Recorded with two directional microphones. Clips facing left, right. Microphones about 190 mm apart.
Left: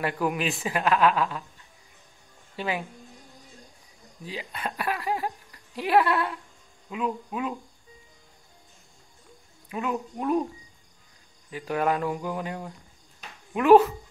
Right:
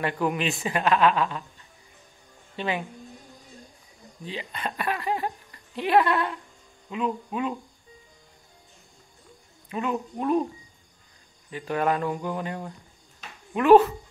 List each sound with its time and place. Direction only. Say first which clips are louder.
0.0 s speech: right 1 dB; 5° left (ahead or behind)
2.5 s speech: right 1 dB; 5° left (ahead or behind)
4.2 s speech: right 1 dB; 5° left (ahead or behind)
9.7 s speech: right 1 dB; centre (ahead or behind)
11.5 s speech: right 1 dB; 10° left (ahead or behind)